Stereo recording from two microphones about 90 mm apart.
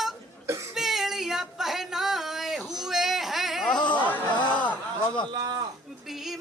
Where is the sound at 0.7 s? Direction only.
5° right (ahead or behind).